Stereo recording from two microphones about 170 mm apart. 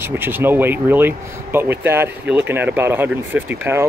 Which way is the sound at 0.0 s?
15° right (ahead or behind).